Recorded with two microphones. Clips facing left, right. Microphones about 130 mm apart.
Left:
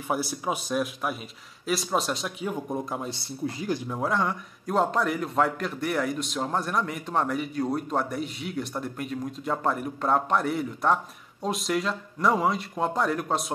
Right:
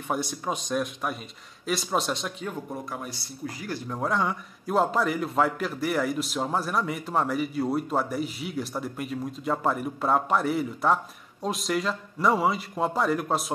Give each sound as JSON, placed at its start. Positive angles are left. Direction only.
{"t": 0.1, "sound": "a man's voice", "side_deg": 5}
{"t": 2.5, "sound": "speech", "side_deg": 20}
{"t": 3.9, "sound": "a man's voice", "side_deg": 0}